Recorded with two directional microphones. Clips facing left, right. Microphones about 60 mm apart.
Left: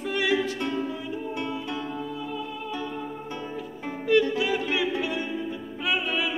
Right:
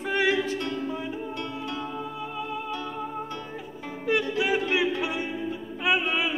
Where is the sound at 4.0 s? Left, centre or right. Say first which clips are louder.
Left 3 dB; centre.